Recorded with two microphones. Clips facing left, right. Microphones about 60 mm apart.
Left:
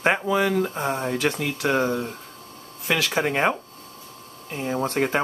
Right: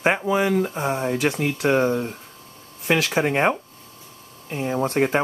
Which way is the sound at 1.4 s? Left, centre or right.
Right.